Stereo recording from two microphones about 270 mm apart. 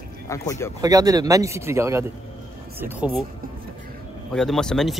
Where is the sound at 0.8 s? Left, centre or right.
Centre.